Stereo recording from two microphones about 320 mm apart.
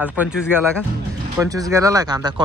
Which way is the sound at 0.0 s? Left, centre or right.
Centre.